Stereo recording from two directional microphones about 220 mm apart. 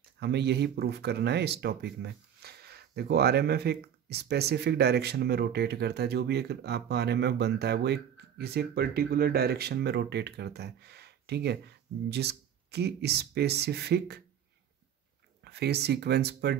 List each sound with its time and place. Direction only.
0.2 s speech: 50° right (ahead or behind)
15.4 s speech: 50° right (ahead or behind)